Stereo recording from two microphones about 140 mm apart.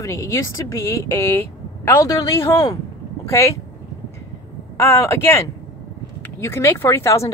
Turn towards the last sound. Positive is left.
turn(degrees=20)  # may be behind; listen again after turning